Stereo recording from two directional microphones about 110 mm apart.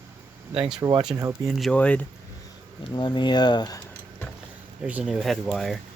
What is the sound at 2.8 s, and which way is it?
Speech, 40° left (ahead or behind).